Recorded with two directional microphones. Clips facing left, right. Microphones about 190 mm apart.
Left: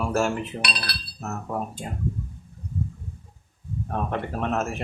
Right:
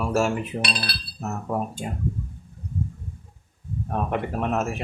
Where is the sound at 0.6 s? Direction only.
30° right (ahead or behind).